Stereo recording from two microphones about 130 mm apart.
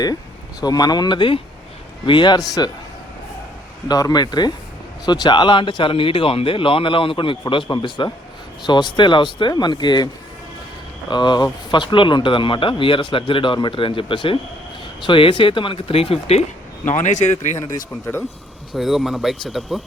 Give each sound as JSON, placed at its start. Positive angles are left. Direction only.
{"t": 0.6, "sound": "speech", "side_deg": 30}
{"t": 3.8, "sound": "speech", "side_deg": 30}
{"t": 11.1, "sound": "speech", "side_deg": 35}
{"t": 16.8, "sound": "speech", "side_deg": 65}
{"t": 18.7, "sound": "speech", "side_deg": 0}